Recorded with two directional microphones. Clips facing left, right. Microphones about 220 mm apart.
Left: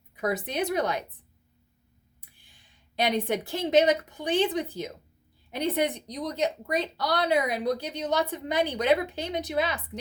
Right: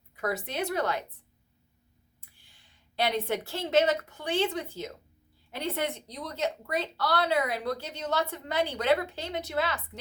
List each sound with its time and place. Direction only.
0.2 s speech: 15° left (ahead or behind)
2.4 s a woman's voice: 15° left (ahead or behind)